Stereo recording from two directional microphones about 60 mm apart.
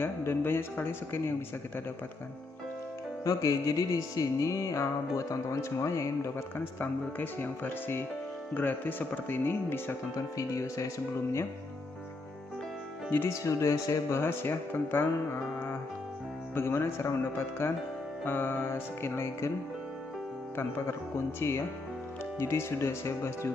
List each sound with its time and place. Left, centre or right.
0.0 s speech: left
3.3 s music: left
6.8 s speech: left
10.1 s music: left
13.3 s music: left
14.1 s speech: left
16.5 s speech: left
21.4 s speech: left